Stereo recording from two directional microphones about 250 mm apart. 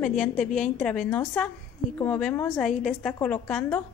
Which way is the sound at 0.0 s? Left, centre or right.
Centre.